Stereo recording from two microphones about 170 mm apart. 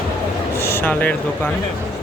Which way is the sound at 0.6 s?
15° left (ahead or behind).